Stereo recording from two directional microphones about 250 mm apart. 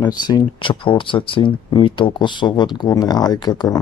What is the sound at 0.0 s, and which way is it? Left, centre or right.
Speech, centre.